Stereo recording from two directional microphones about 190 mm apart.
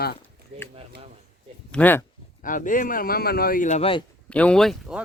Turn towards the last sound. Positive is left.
turn(degrees=0)  # may be behind; listen again after turning